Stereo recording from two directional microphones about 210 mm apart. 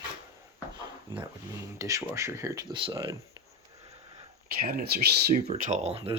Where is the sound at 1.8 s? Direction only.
15° right (ahead or behind).